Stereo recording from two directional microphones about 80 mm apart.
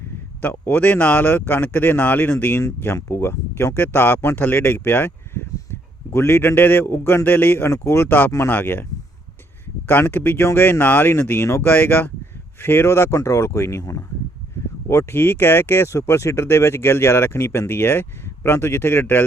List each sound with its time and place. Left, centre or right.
0.4 s speech: left